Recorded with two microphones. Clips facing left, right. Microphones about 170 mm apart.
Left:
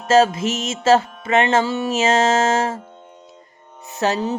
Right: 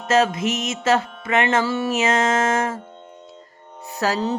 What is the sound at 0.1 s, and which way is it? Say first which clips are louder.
Music: left 3 dB; 30° left (ahead or behind).